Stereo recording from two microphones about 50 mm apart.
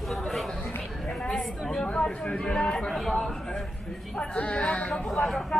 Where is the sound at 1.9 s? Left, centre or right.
Left.